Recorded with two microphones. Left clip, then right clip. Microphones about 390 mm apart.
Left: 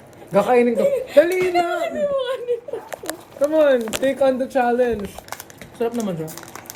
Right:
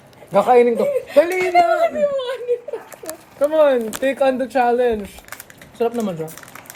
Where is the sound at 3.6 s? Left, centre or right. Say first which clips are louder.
Right 1 dB; centre.